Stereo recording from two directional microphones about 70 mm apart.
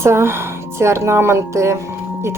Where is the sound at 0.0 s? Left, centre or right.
Right.